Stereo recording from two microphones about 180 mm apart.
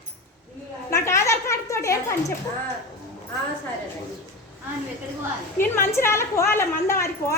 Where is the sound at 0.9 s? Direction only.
15° left (ahead or behind).